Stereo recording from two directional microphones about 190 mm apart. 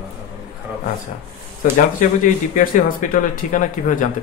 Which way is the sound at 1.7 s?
45° left (ahead or behind).